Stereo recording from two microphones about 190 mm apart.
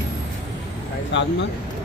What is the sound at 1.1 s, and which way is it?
Vehicle, 70° left (ahead or behind).